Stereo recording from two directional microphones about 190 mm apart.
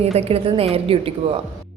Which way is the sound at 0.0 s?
35° right (ahead or behind).